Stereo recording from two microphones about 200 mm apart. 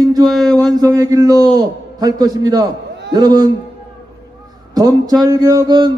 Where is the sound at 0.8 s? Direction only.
15° right (ahead or behind).